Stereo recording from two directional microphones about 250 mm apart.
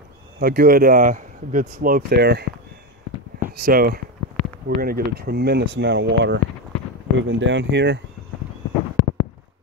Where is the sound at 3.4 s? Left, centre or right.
Right.